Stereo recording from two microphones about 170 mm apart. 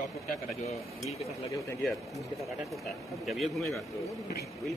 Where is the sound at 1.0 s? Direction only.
20° left (ahead or behind).